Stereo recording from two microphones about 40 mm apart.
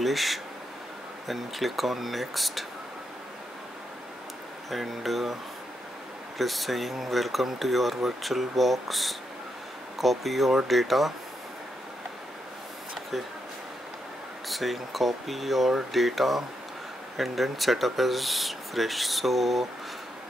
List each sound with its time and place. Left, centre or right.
0.0 s speech: centre
4.6 s speech: centre
6.3 s speech: centre
14.5 s speech: centre